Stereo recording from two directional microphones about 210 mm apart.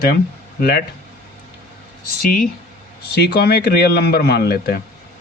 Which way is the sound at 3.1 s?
50° left (ahead or behind).